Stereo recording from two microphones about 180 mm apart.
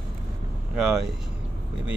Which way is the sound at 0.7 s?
Centre (ahead or behind).